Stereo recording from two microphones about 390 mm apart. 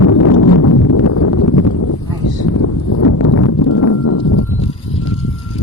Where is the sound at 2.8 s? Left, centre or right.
Left.